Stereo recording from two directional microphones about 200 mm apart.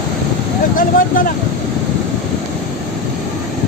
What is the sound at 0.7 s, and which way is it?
Vehicle, 45° left (ahead or behind).